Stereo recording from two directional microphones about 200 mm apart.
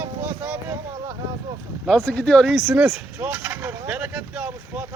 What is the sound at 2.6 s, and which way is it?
Vehicle, 5° right (ahead or behind).